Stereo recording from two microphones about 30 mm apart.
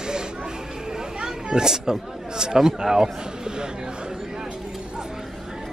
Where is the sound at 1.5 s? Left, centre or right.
Centre.